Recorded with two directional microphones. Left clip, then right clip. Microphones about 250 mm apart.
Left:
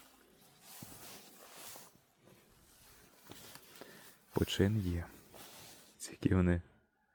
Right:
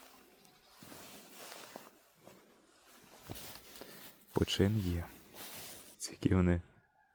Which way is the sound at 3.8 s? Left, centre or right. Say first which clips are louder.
Right 1 dB; centre.